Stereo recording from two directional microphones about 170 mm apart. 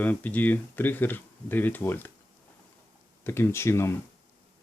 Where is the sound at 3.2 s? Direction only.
15° left (ahead or behind).